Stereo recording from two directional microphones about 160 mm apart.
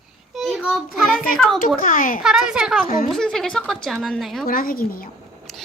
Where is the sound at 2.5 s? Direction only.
5° right (ahead or behind).